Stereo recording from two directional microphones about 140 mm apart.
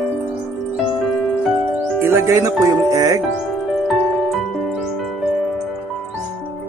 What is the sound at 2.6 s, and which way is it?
Music, 20° right (ahead or behind).